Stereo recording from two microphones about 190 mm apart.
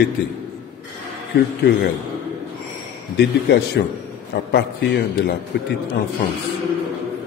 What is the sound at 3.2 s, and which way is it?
A man's voice, 60° left (ahead or behind).